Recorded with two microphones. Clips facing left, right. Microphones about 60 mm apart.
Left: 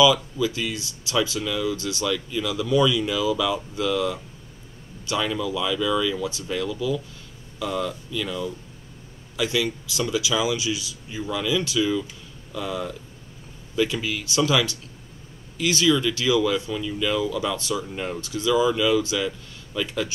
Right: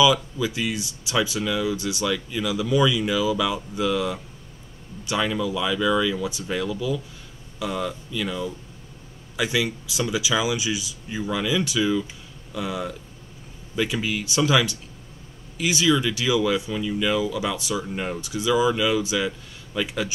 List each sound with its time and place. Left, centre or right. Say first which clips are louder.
0.0 s speech: left 1 dB; centre